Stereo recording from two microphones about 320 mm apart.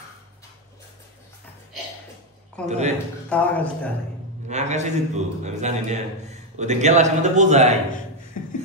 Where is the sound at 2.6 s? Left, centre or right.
Right.